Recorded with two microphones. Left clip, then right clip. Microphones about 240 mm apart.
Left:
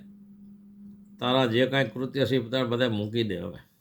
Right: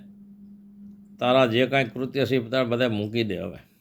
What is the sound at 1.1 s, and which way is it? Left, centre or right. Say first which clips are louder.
Speech: right 4 dB; centre.